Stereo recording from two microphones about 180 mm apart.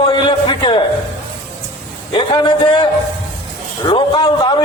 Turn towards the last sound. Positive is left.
turn(degrees=25)  # may be behind; listen again after turning